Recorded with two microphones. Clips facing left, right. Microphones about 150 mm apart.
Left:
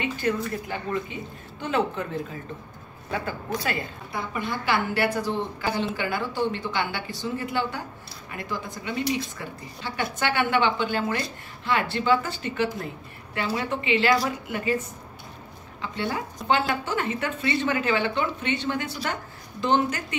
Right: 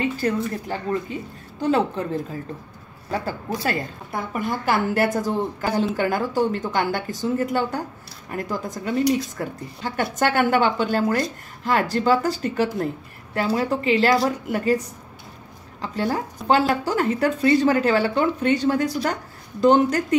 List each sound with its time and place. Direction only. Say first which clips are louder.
0.2 s speech: right 1 dB; 35° right (ahead or behind)
1.6 s speech: right 5 dB; 35° right (ahead or behind)
3.1 s a woman's voice: right 3 dB; 35° right (ahead or behind)